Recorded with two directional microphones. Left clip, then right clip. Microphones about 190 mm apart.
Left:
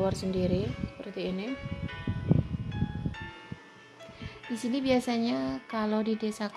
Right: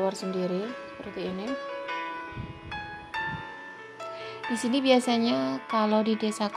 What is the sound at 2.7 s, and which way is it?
Music, 50° right (ahead or behind).